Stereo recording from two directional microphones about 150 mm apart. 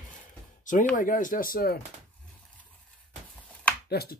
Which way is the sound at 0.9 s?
60° left (ahead or behind).